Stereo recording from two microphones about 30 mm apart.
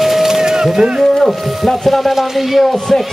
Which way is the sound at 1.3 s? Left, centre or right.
Centre.